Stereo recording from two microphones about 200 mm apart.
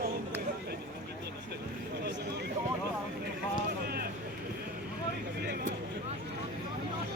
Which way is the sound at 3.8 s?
50° right (ahead or behind).